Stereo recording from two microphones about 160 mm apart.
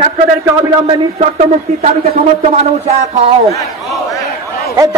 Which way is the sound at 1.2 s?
45° right (ahead or behind).